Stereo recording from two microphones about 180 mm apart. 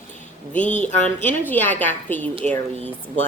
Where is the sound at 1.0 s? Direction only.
10° left (ahead or behind).